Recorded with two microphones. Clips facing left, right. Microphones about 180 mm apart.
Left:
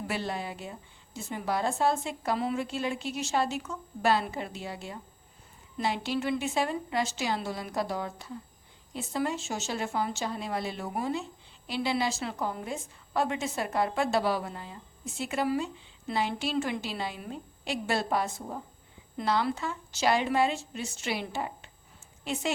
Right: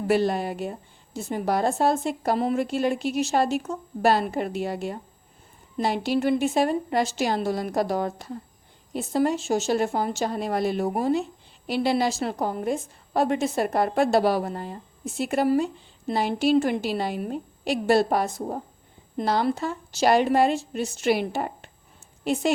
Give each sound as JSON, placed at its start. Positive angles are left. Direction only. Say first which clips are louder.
{"t": 0.1, "sound": "a woman's voice", "louder": "right 13 dB", "side_deg": -40}
{"t": 0.6, "sound": "speech", "louder": "right 10 dB", "side_deg": -65}
{"t": 1.3, "sound": "a woman's voice", "louder": "right 6 dB", "side_deg": -45}
{"t": 5.7, "sound": "a woman's voice", "louder": "right 6 dB", "side_deg": -40}
{"t": 6.5, "sound": "a woman's voice", "louder": "right 7 dB", "side_deg": -40}
{"t": 11.1, "sound": "speech", "louder": "right 9 dB", "side_deg": -65}
{"t": 11.8, "sound": "a woman's voice", "louder": "right 6 dB", "side_deg": -40}
{"t": 17.7, "sound": "a woman's voice", "louder": "right 9 dB", "side_deg": -40}
{"t": 20.5, "sound": "a woman's voice", "louder": "right 8 dB", "side_deg": -60}